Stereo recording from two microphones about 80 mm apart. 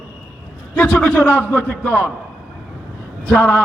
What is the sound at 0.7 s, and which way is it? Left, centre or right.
A man's voice, centre.